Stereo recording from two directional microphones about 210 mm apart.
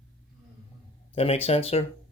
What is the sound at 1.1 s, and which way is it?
Speech, 30° left (ahead or behind).